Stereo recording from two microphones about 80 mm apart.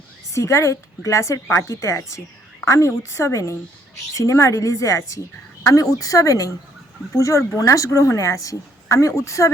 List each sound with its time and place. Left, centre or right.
0.3 s a woman's voice: left